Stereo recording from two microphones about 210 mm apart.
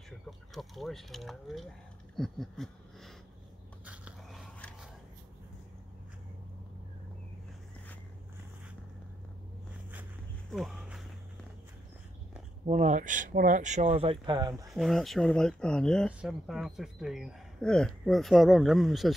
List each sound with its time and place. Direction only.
0.6 s speech: centre (ahead or behind)
2.1 s a sound: centre (ahead or behind)
3.8 s biting: 5° right (ahead or behind)
10.5 s walk: centre (ahead or behind)
12.6 s speech: 35° right (ahead or behind)
14.5 s speech: 5° right (ahead or behind)